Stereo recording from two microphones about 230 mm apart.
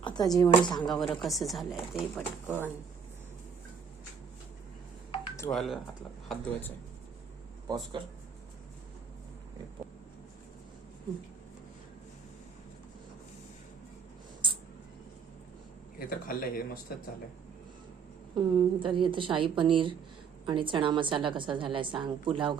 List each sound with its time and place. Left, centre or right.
0.0 s speech: centre
0.9 s speech: centre
5.5 s speech: centre
7.7 s a woman's voice: centre
16.0 s a man's voice: left
18.3 s a woman's voice: right